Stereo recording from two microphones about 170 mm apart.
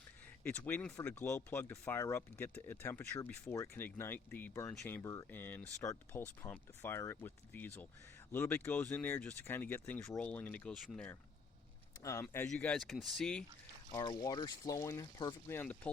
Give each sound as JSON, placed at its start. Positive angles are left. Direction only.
{"t": 0.4, "sound": "speech", "side_deg": 10}
{"t": 13.9, "sound": "speech", "side_deg": 20}